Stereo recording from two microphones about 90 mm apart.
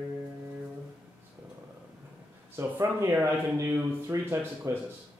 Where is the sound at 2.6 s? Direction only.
30° right (ahead or behind).